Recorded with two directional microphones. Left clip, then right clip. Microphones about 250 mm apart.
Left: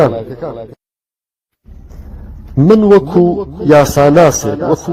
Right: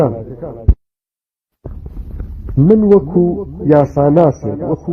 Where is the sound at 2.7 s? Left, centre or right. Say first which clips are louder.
Left 3 dB; left.